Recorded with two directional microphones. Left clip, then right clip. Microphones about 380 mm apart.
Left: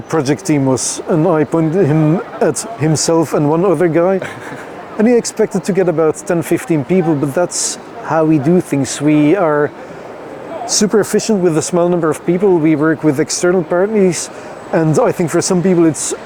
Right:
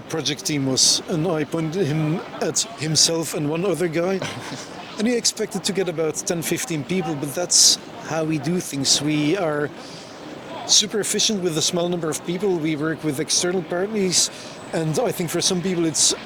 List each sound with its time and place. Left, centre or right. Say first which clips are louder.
0.1 s speech: left 10 dB; left
10.9 s speech: left 9 dB; left